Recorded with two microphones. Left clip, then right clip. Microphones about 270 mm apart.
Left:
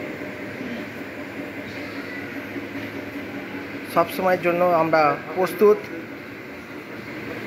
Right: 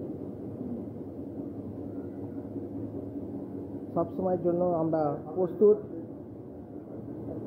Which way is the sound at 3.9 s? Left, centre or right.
Left.